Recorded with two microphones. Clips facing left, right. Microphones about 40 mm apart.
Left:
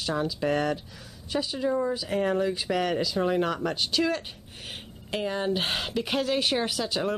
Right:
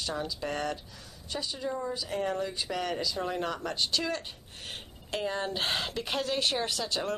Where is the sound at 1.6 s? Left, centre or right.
Left; by 3.2 s centre.